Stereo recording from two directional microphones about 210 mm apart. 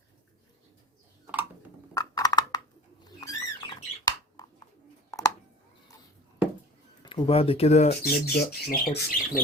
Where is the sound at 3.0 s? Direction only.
20° left (ahead or behind).